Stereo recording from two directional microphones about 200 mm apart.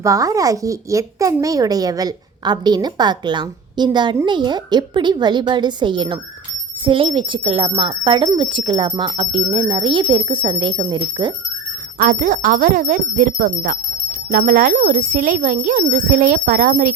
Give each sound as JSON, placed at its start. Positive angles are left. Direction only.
{"t": 0.0, "sound": "a child's voice", "side_deg": -15}
{"t": 11.9, "sound": "speech", "side_deg": -40}